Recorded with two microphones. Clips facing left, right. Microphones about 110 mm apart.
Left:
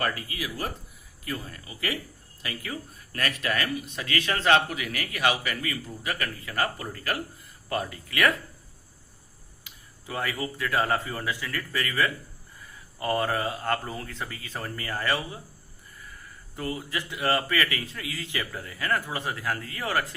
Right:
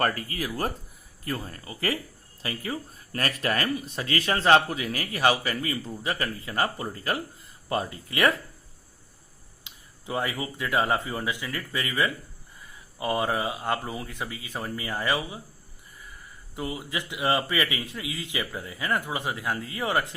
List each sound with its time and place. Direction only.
0.0 s speech: 45° right (ahead or behind); by 8.4 s 25° right (ahead or behind)
9.6 s speech: 20° right (ahead or behind)
16.6 s speech: 15° right (ahead or behind)